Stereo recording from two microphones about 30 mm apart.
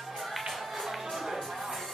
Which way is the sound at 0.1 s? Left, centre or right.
Centre.